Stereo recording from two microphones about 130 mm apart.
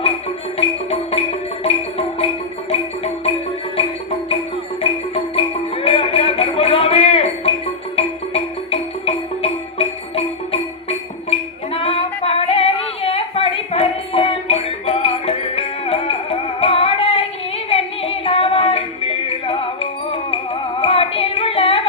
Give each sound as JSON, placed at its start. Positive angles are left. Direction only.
{"t": 0.9, "sound": "music", "side_deg": 50}
{"t": 4.8, "sound": "music", "side_deg": 45}